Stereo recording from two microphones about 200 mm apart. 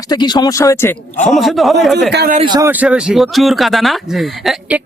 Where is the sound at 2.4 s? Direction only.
20° right (ahead or behind).